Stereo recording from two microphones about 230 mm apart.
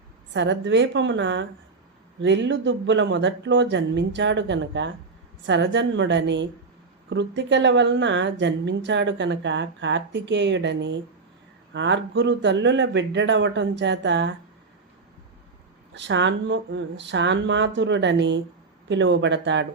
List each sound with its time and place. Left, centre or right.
0.3 s a woman's voice: right
16.0 s a woman's voice: right